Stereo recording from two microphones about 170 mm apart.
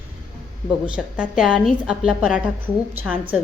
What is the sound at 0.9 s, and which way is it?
A woman's voice, 5° right (ahead or behind).